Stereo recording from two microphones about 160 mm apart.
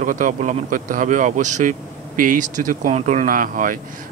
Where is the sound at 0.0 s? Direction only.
55° right (ahead or behind).